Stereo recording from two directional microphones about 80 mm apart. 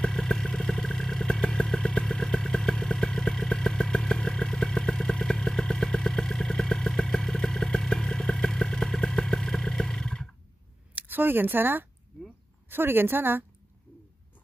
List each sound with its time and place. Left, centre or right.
0.0 s vehicle: centre
11.0 s a woman's voice: right